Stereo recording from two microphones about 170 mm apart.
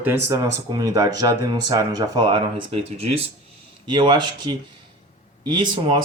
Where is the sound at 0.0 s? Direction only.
15° right (ahead or behind).